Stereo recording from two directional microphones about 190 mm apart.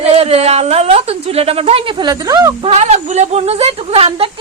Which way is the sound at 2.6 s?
30° right (ahead or behind).